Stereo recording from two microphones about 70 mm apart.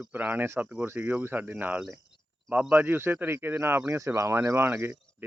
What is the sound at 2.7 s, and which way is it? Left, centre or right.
Speech, right.